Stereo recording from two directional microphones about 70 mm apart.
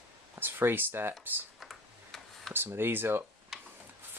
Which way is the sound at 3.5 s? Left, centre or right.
Centre.